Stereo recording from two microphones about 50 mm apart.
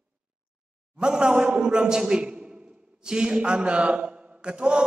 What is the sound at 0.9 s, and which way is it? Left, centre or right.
A man's voice, centre.